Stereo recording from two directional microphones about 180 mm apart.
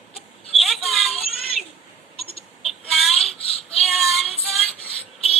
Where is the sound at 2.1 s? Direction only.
30° left (ahead or behind).